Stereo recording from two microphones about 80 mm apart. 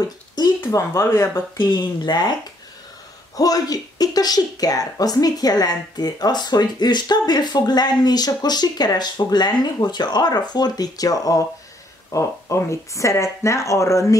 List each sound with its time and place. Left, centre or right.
0.6 s speech: left
3.3 s a woman's voice: left